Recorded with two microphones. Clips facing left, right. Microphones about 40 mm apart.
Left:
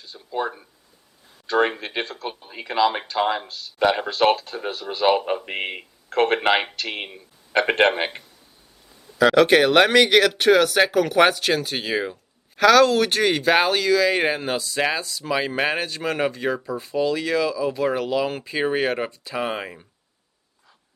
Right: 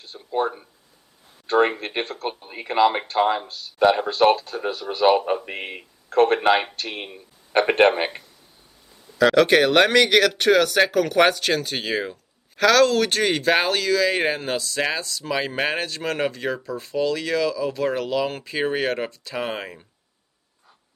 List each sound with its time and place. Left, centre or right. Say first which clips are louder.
0.0 s a sound: right 2 dB; right
1.8 s speech: right 1 dB; right
4.4 s speech: right 2 dB; left
4.6 s a man's voice: right 2 dB; left
6.1 s speech: right 2 dB; left
6.5 s speech: right 1 dB; left
7.7 s a man's voice: right 2 dB; left
9.1 s speech: left 1 dB; centre